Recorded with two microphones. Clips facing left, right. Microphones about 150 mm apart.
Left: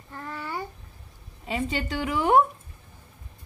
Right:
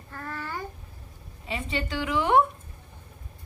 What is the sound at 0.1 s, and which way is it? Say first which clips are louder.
Babbling: left 1 dB; 15° left (ahead or behind).